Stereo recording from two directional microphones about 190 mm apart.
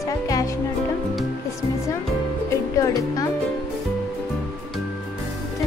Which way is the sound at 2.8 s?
20° left (ahead or behind).